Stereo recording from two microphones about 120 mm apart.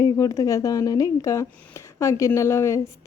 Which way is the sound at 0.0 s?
25° left (ahead or behind).